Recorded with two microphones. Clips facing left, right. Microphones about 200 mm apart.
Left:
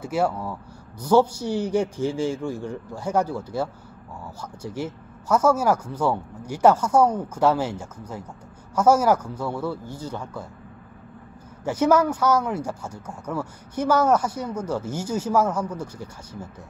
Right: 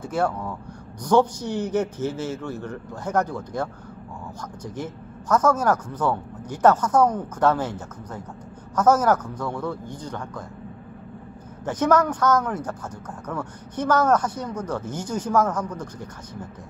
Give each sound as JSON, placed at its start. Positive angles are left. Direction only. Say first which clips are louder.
{"t": 0.0, "sound": "speech", "louder": "left 1 dB", "side_deg": 10}
{"t": 11.6, "sound": "speech", "louder": "left 1 dB", "side_deg": 10}